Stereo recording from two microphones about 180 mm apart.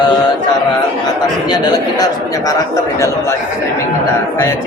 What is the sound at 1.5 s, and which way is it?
A man's voice, 20° left (ahead or behind).